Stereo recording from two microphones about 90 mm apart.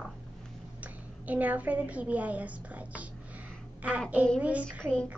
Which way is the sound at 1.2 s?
15° right (ahead or behind).